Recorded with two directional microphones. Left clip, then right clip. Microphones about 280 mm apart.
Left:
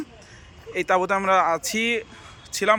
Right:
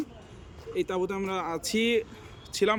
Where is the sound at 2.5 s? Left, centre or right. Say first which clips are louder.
Left 4 dB; centre.